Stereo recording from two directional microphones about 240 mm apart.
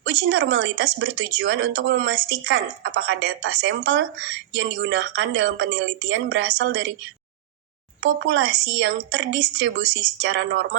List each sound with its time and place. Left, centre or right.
0.0 s speech: right
8.0 s speech: right